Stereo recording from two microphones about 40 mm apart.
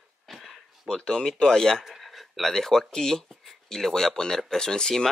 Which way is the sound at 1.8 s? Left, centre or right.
Centre.